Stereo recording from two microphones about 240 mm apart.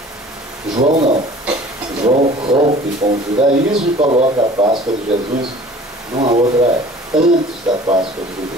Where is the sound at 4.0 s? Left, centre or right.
Right.